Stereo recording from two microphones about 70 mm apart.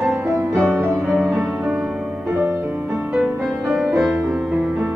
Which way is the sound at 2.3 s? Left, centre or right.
Right.